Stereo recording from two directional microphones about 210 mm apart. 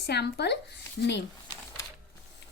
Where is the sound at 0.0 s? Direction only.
50° left (ahead or behind).